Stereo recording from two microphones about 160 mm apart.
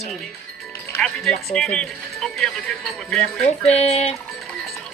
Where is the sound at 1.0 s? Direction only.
Centre (ahead or behind).